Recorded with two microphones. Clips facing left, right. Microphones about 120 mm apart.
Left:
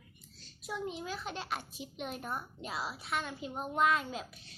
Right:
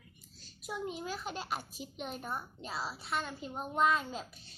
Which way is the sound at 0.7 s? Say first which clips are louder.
Even; 5° right (ahead or behind).